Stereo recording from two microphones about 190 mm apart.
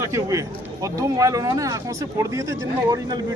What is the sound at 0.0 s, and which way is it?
Speech, 15° right (ahead or behind).